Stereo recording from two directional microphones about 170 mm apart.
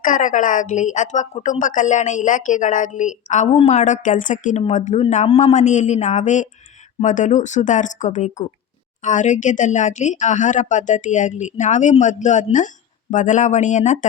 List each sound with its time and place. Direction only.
0.0 s a woman's voice: 50° left (ahead or behind)